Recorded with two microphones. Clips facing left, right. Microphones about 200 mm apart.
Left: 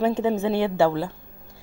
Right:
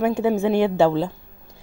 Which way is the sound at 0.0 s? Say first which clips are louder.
Right 2 dB; 10° right (ahead or behind).